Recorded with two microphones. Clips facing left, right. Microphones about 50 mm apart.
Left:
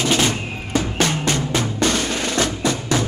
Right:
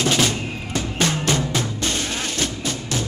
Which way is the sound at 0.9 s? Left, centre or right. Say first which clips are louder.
Right 2 dB; left.